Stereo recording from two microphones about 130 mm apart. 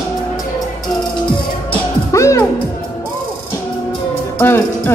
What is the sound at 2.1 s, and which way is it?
Speech, 20° left (ahead or behind).